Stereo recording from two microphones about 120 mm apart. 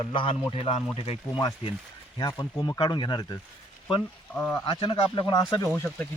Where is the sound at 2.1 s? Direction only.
35° left (ahead or behind).